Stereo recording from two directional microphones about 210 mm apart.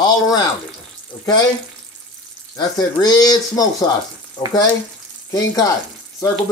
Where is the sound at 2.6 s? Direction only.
20° left (ahead or behind).